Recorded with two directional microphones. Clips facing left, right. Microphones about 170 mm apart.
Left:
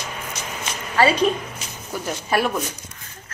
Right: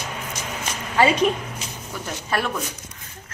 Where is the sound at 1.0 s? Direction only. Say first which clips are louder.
Even; 15° right (ahead or behind).